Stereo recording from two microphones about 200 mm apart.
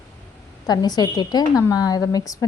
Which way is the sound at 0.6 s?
20° left (ahead or behind).